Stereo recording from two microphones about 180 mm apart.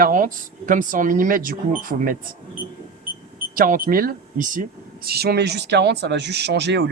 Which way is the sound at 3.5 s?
50° right (ahead or behind).